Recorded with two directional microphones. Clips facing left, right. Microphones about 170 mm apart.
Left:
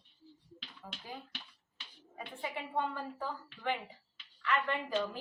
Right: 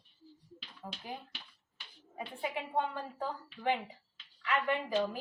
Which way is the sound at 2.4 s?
15° right (ahead or behind).